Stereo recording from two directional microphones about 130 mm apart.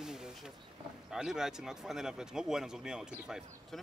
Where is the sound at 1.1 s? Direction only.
5° right (ahead or behind).